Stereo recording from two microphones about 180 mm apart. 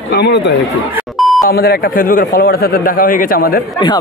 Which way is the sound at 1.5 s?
60° left (ahead or behind).